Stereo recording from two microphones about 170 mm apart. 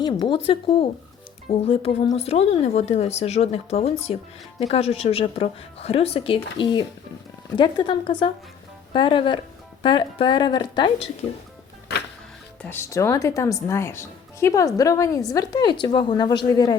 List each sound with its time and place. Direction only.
0.0 s speech: 30° left (ahead or behind)
7.5 s a woman's voice: 25° left (ahead or behind)
12.6 s a woman's voice: 15° left (ahead or behind)